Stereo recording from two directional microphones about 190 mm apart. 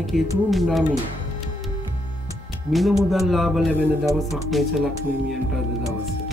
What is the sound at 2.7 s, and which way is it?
Speech, centre (ahead or behind).